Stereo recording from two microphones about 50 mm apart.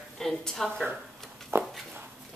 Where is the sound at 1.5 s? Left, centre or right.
Right.